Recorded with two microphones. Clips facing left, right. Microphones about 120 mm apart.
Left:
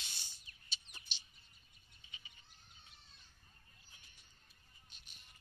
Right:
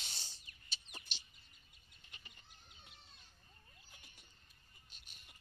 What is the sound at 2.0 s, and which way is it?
Goat, 70° right (ahead or behind).